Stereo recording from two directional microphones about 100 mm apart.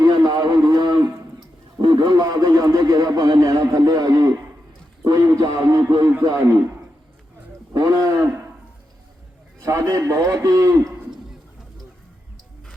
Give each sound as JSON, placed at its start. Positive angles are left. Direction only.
{"t": 0.0, "sound": "a sound", "side_deg": -40}
{"t": 1.8, "sound": "radio", "side_deg": -50}
{"t": 6.2, "sound": "a man's voice", "side_deg": -35}
{"t": 9.6, "sound": "a man's voice", "side_deg": -30}